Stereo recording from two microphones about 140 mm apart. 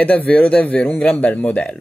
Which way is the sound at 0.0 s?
10° left (ahead or behind).